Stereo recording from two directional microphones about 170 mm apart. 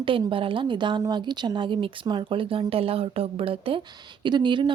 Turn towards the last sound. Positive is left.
turn(degrees=-25)  # may be behind; listen again after turning